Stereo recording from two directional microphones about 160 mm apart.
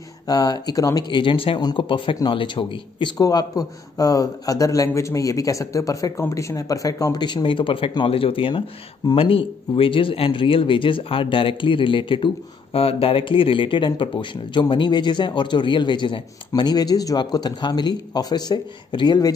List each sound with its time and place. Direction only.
0.3 s speech: 25° left (ahead or behind)